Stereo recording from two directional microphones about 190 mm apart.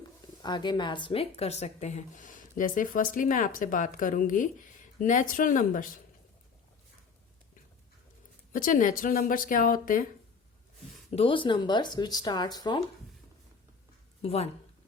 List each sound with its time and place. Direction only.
0.4 s speech: 25° left (ahead or behind); by 5.9 s 45° left (ahead or behind)
8.5 s speech: 45° left (ahead or behind)
11.1 s speech: 30° left (ahead or behind)
14.2 s speech: 30° left (ahead or behind)